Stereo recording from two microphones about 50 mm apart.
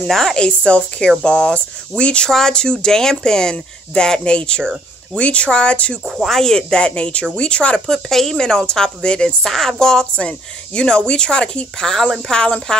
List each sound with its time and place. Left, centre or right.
0.1 s speech: centre
0.4 s speech: left
6.1 s speech: centre
6.4 s speech: centre
7.9 s speech: centre
9.5 s speech: centre
11.9 s speech: centre
12.3 s speech: centre